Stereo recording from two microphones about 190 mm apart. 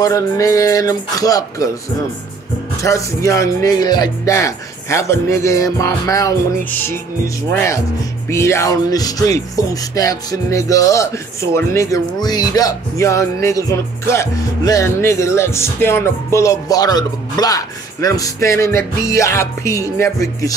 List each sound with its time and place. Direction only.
0.0 s speech: 15° left (ahead or behind)
2.8 s speech: 15° left (ahead or behind)